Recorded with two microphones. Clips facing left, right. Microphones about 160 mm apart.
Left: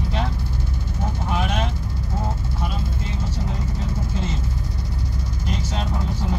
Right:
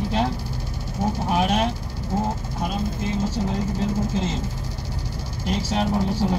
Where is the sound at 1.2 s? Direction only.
35° right (ahead or behind).